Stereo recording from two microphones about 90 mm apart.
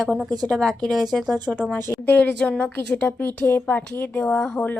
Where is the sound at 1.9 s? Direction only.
15° left (ahead or behind).